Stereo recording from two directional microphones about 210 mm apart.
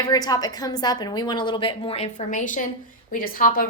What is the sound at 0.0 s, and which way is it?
A woman's voice, 20° left (ahead or behind).